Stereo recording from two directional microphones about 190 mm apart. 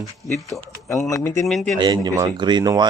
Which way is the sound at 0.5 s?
Centre (ahead or behind).